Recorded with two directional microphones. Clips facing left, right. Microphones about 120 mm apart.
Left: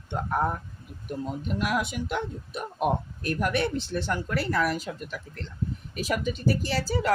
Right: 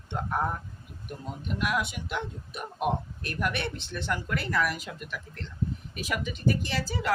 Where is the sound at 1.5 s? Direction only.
40° left (ahead or behind).